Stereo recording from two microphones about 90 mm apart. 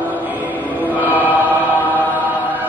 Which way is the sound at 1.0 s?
20° right (ahead or behind).